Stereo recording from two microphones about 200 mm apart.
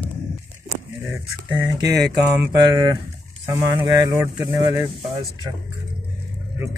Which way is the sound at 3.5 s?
15° right (ahead or behind).